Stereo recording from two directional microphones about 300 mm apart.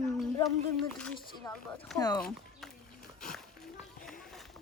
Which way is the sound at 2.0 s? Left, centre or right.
Centre.